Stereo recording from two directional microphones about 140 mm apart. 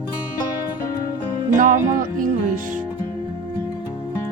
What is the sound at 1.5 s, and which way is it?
Music, 65° right (ahead or behind).